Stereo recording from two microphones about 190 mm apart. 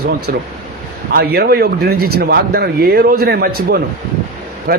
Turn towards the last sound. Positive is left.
turn(degrees=-50)  # may be behind; listen again after turning